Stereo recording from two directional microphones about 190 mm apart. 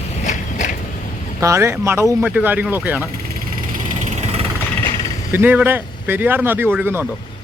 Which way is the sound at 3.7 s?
40° right (ahead or behind).